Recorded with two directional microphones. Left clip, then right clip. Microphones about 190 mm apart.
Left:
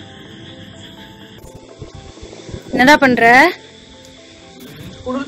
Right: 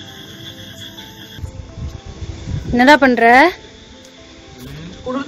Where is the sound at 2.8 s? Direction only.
5° right (ahead or behind).